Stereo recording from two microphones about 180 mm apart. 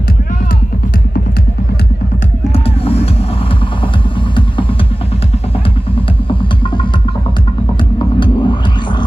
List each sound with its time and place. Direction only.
2.5 s music: 35° left (ahead or behind)
8.2 s music: 25° left (ahead or behind)